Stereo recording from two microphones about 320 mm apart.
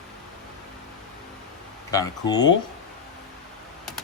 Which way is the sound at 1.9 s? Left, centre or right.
Centre.